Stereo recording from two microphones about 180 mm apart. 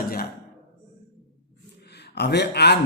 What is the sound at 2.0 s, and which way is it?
Speech, 65° left (ahead or behind).